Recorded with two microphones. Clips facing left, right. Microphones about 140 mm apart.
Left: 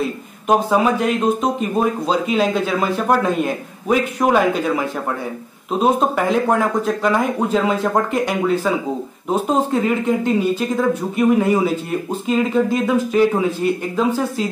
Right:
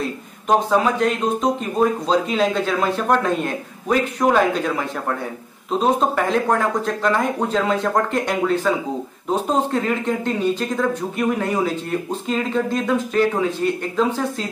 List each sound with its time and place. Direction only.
0.5 s a man's voice: 10° left (ahead or behind)